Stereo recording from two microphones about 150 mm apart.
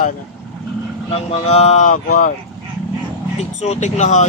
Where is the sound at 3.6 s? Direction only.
50° left (ahead or behind).